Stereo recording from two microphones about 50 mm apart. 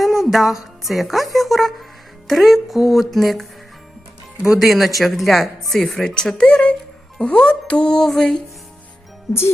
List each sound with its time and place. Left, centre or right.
0.0 s music: centre
2.2 s speech: centre
4.5 s speech: centre
5.9 s speech: centre